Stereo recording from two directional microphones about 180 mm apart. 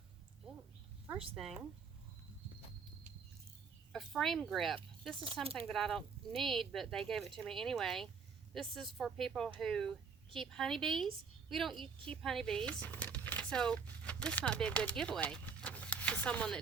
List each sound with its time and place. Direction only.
1.4 s speech: centre (ahead or behind)
3.9 s speech: centre (ahead or behind)
5.2 s speech: 30° right (ahead or behind)
5.5 s a woman's voice: centre (ahead or behind)